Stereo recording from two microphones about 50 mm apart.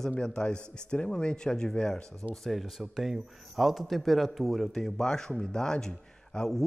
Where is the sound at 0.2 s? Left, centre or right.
Centre.